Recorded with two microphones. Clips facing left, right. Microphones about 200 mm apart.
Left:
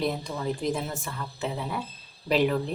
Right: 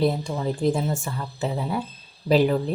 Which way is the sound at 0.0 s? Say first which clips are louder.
Right 5 dB; 30° right (ahead or behind).